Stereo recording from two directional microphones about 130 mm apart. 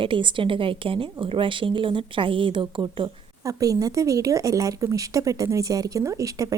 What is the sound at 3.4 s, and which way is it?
A woman's voice, 25° right (ahead or behind).